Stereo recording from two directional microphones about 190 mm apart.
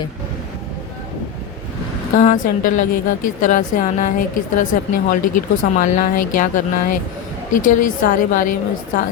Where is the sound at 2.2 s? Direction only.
45° left (ahead or behind).